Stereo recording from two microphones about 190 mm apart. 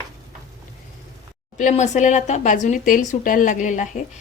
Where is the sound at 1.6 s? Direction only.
40° left (ahead or behind).